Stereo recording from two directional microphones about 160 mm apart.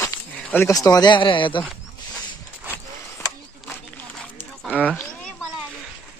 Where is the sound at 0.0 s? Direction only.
15° left (ahead or behind).